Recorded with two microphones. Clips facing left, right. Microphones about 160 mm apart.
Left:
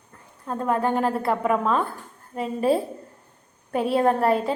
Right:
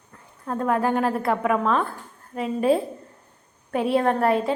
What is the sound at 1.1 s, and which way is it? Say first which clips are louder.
A woman's voice: even; 30° left (ahead or behind).